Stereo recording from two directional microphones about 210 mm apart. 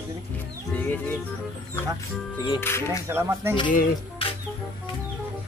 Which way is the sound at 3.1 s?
10° right (ahead or behind).